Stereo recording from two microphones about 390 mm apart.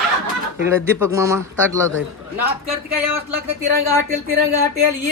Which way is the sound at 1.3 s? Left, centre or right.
Centre.